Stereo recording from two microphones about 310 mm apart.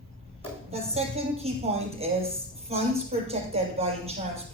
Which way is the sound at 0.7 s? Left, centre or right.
Centre.